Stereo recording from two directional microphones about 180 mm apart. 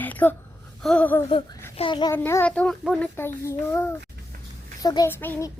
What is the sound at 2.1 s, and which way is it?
A child's voice, 10° left (ahead or behind).